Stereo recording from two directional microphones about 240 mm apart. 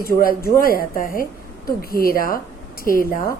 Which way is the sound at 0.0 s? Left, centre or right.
Left.